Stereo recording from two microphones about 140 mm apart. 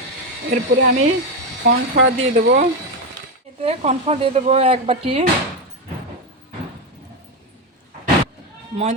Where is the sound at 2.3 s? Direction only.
65° right (ahead or behind).